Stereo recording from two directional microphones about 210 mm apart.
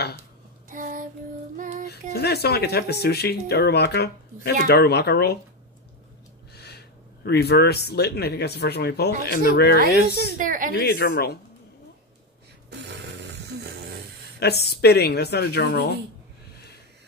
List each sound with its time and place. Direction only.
0.7 s a sound: 40° right (ahead or behind)
1.6 s music: 40° right (ahead or behind)
1.9 s speech: 50° left (ahead or behind)
6.5 s a sound: 50° left (ahead or behind)
7.2 s speech: 50° left (ahead or behind)
10.1 s speech: 45° right (ahead or behind)
10.7 s speech: 50° left (ahead or behind)
13.6 s a sound: 50° right (ahead or behind)
14.4 s speech: 50° left (ahead or behind)